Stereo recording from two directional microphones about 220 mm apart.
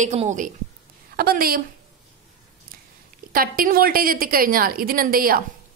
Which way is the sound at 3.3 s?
40° right (ahead or behind).